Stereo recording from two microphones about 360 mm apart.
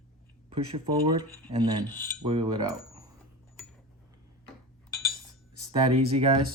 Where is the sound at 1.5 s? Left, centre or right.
Centre.